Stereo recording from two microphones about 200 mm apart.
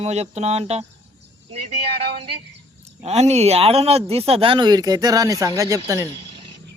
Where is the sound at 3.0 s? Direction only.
35° right (ahead or behind); by 6.1 s 15° right (ahead or behind).